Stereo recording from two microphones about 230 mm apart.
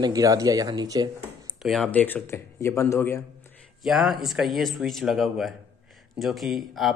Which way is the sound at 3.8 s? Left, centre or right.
Centre.